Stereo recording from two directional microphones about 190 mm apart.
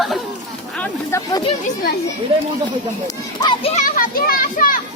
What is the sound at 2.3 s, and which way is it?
Speech, 30° right (ahead or behind).